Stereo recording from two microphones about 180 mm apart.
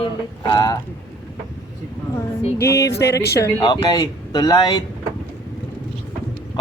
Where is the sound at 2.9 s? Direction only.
65° left (ahead or behind).